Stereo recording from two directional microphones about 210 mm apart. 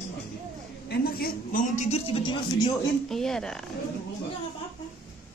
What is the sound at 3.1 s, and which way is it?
Speech, centre (ahead or behind).